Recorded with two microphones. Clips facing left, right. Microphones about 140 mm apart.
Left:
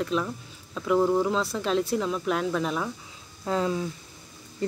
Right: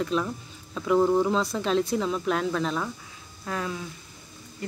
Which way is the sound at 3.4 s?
25° left (ahead or behind).